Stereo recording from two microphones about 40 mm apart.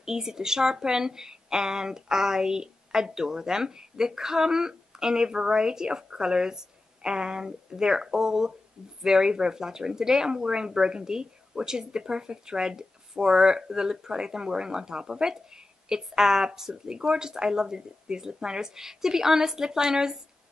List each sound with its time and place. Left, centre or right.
0.0 s speech: centre